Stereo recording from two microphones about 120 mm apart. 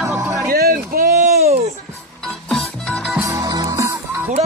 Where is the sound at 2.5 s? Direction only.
5° left (ahead or behind).